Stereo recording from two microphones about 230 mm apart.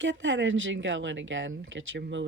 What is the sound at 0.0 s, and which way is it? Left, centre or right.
Speech, right.